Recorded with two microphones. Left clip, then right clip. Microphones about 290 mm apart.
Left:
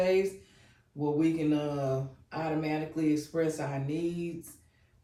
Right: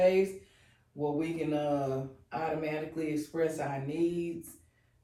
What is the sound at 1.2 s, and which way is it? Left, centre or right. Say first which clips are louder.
Speech: left 7 dB; centre.